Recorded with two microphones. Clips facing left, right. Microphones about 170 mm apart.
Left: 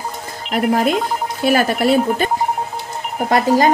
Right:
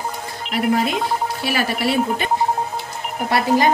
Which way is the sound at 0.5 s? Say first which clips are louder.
Left 3 dB; 50° left (ahead or behind).